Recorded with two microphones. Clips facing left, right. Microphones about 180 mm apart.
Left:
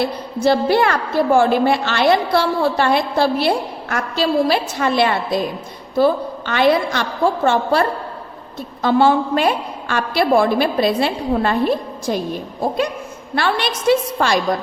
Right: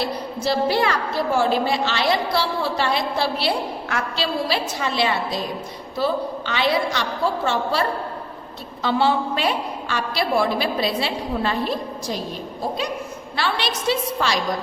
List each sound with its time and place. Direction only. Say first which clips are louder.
0.4 s a woman's voice: left 5 dB; 55° left (ahead or behind)
13.3 s a woman's voice: left 5 dB; 50° left (ahead or behind)